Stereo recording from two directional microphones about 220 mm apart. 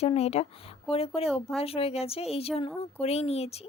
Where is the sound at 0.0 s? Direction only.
30° left (ahead or behind).